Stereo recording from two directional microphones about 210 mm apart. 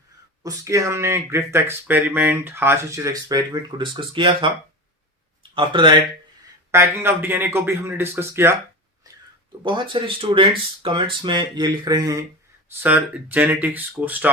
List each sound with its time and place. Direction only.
0.4 s speech: 15° right (ahead or behind)
6.7 s speech: 10° right (ahead or behind)
9.0 s a sound: 15° right (ahead or behind)
9.6 s speech: 25° right (ahead or behind)